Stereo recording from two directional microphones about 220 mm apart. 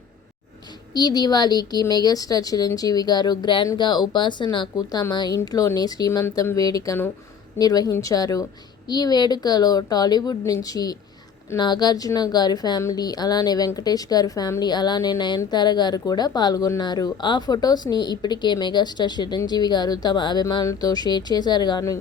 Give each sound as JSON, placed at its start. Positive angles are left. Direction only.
{"t": 0.9, "sound": "a woman's voice", "side_deg": 20}